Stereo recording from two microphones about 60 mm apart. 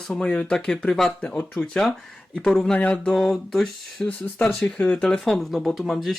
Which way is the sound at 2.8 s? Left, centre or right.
Left.